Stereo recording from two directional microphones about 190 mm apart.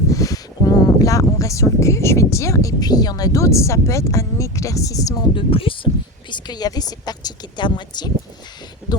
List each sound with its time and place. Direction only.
0.1 s speech: 20° left (ahead or behind)